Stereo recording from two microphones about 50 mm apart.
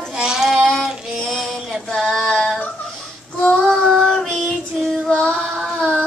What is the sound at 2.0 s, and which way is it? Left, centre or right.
Female singing, centre.